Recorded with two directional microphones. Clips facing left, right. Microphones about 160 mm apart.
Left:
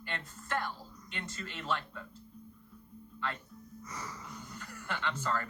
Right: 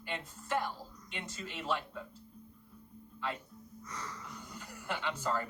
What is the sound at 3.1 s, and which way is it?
Speech, 10° right (ahead or behind).